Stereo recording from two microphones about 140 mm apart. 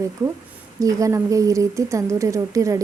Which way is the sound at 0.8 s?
25° right (ahead or behind).